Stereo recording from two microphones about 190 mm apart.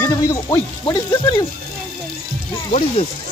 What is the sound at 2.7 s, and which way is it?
Speech, 35° left (ahead or behind).